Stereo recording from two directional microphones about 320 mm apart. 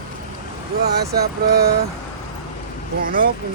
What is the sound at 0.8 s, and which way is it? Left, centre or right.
Speech, right.